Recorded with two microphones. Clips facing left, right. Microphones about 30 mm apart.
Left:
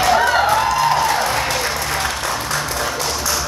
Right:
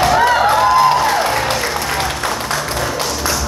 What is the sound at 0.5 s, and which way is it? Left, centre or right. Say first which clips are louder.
Music: right 4 dB; right.